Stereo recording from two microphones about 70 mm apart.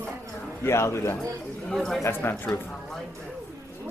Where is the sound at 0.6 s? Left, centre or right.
Left.